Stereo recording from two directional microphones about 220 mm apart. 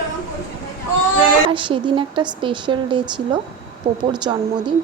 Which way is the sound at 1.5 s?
20° right (ahead or behind).